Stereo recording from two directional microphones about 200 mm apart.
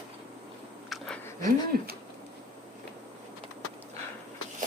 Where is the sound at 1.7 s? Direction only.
50° right (ahead or behind).